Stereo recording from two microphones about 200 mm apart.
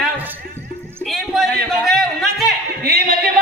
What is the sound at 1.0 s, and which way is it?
Music, centre (ahead or behind).